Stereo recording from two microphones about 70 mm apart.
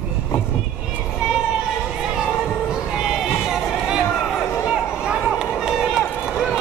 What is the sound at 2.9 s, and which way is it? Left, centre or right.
Run, centre.